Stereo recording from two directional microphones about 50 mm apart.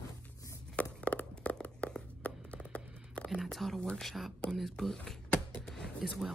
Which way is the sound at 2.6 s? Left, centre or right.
Left.